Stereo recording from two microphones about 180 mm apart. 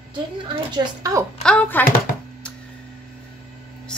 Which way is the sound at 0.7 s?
20° right (ahead or behind).